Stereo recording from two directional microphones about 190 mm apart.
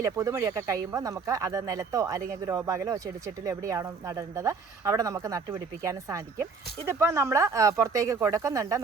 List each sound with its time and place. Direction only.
0.0 s speech: 15° right (ahead or behind)